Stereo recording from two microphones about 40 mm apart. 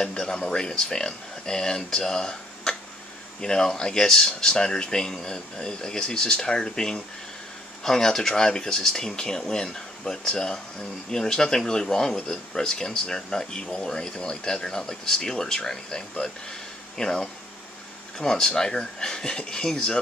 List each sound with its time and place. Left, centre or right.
0.0 s speech: centre